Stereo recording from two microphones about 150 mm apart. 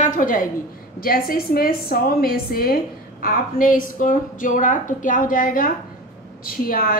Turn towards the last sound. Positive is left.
turn(degrees=75)  # may be behind; listen again after turning